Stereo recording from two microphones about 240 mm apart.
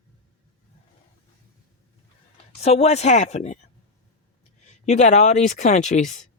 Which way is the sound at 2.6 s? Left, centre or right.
Left.